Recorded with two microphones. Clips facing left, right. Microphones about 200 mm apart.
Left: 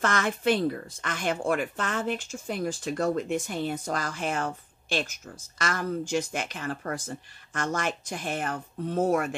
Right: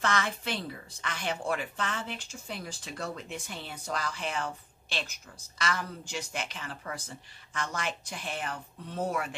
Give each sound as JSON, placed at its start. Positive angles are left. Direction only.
{"t": 0.0, "sound": "speech", "side_deg": 50}